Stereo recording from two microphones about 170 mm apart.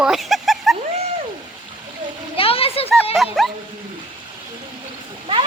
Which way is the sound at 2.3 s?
35° left (ahead or behind).